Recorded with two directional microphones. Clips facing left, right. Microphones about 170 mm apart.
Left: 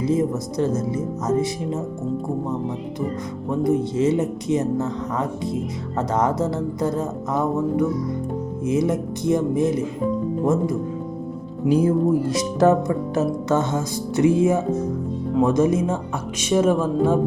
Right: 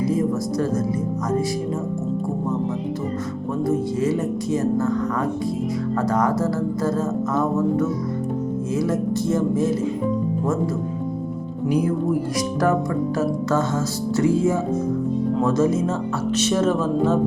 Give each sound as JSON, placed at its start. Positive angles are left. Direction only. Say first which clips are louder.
{"t": 0.0, "sound": "speech", "louder": "even", "side_deg": 20}
{"t": 3.5, "sound": "speech", "louder": "left 2 dB", "side_deg": 15}
{"t": 11.7, "sound": "speech", "louder": "left 3 dB", "side_deg": 25}